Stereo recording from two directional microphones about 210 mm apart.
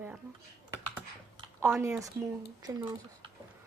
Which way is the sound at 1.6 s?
10° right (ahead or behind).